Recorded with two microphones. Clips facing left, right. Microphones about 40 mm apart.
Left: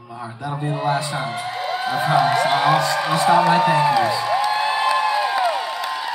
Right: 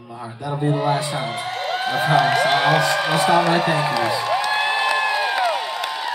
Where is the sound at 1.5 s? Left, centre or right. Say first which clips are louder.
Right 1 dB; right.